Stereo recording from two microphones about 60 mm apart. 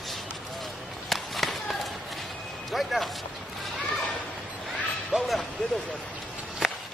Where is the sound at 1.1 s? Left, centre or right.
Centre.